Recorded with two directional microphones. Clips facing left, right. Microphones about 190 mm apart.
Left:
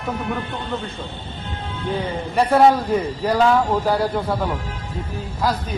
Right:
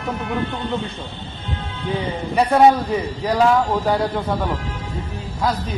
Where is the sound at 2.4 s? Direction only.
Centre (ahead or behind).